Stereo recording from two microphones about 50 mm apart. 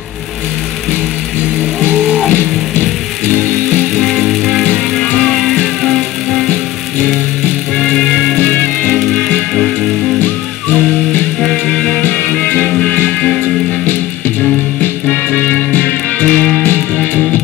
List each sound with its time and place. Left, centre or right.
2.0 s music: left
3.9 s music: centre
5.0 s music: centre
5.3 s music: centre
7.8 s music: centre
8.4 s music: left
10.2 s music: left
11.4 s music: centre
12.0 s music: left
14.8 s music: left